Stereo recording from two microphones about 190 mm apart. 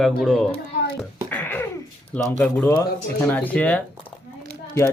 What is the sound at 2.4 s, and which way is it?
Speech, 10° left (ahead or behind).